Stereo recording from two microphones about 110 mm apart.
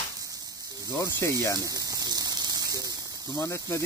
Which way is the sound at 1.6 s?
35° right (ahead or behind).